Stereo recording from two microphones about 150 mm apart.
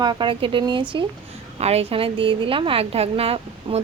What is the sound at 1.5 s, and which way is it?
A woman's voice, 45° right (ahead or behind).